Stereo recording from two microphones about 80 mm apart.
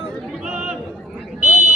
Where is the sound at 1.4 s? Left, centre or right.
Right.